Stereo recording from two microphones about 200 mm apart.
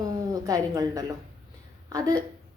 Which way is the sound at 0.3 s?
20° right (ahead or behind).